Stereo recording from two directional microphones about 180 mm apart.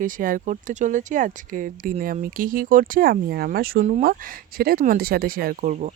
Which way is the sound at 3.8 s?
45° right (ahead or behind).